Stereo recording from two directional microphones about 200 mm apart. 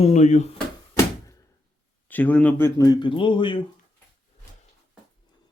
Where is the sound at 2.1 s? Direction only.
10° left (ahead or behind); by 3.5 s 25° left (ahead or behind).